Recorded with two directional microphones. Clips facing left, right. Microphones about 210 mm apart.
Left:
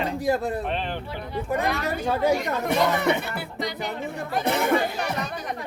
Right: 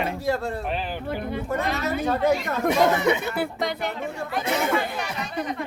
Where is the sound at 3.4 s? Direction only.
55° right (ahead or behind).